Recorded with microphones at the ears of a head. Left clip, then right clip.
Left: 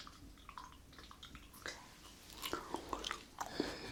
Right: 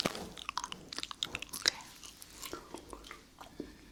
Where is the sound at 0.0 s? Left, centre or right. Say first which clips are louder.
Right 18 dB; right.